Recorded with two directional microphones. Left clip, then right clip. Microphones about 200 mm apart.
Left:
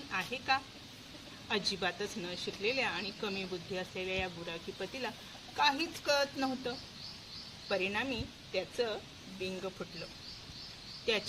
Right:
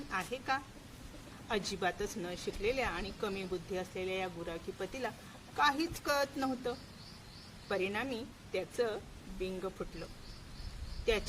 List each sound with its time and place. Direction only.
0.1 s speech: 10° right (ahead or behind)